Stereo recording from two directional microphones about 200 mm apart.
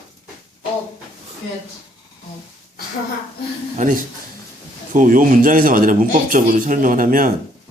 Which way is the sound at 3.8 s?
40° right (ahead or behind).